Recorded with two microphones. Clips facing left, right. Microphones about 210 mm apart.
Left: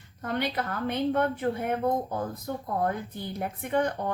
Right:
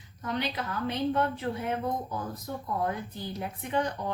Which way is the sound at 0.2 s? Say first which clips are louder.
Left 3 dB; 55° left (ahead or behind).